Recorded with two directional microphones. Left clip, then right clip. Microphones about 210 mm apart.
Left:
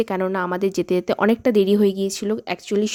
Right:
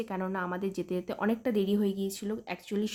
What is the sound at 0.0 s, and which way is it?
Speech, 40° left (ahead or behind).